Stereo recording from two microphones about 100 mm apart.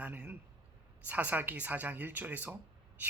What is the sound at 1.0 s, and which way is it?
Speech, 15° right (ahead or behind).